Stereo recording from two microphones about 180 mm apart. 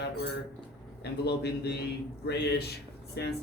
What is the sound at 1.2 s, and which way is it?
Speech, 65° left (ahead or behind).